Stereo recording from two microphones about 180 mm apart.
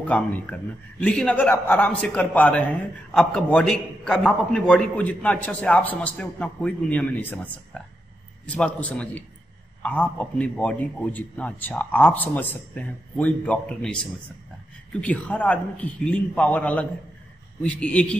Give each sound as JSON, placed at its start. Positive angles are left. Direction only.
{"t": 0.0, "sound": "a man's voice", "side_deg": 10}